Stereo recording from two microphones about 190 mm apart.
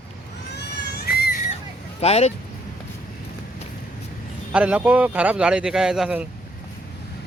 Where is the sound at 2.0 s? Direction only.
35° left (ahead or behind).